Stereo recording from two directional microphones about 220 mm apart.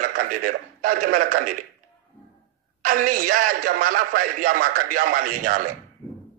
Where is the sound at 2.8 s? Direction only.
40° right (ahead or behind).